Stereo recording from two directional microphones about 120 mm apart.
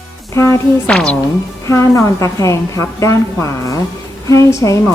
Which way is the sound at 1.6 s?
25° left (ahead or behind).